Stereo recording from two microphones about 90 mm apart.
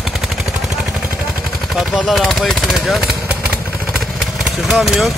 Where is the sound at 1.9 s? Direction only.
5° right (ahead or behind).